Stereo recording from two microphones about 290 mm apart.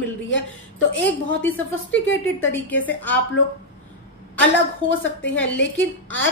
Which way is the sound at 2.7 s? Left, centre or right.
Centre.